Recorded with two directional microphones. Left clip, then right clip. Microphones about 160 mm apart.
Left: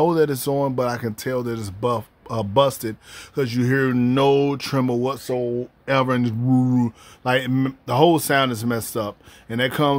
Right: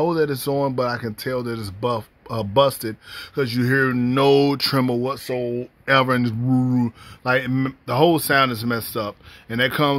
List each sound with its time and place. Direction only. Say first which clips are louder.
0.0 s speech: left 2 dB; 15° left (ahead or behind)
3.9 s speech: left 1 dB; 10° left (ahead or behind)
4.3 s speech: right 4 dB; 30° right (ahead or behind)
4.6 s speech: right 2 dB; 10° right (ahead or behind)
5.0 s speech: left 1 dB; 15° left (ahead or behind)
5.3 s speech: left 1 dB; centre (ahead or behind)
9.5 s speech: right 1 dB; centre (ahead or behind)